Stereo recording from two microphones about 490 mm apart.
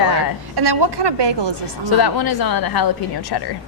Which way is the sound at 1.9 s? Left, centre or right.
Left.